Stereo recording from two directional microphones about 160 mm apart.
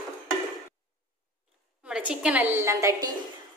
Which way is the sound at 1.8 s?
5° right (ahead or behind).